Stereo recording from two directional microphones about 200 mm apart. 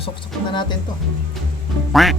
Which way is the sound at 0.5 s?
20° left (ahead or behind).